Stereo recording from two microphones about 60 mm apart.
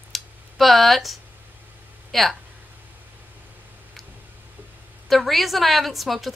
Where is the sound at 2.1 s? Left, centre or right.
Centre.